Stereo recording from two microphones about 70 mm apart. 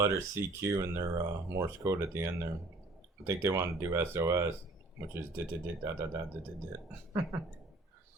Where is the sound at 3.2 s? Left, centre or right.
Right.